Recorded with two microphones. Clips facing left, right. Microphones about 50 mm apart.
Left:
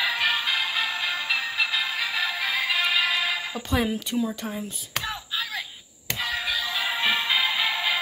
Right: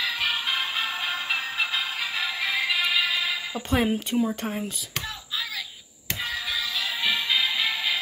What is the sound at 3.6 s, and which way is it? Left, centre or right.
Speech, right.